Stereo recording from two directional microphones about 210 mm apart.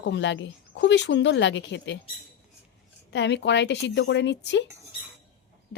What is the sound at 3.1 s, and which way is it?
A woman's voice, 55° left (ahead or behind).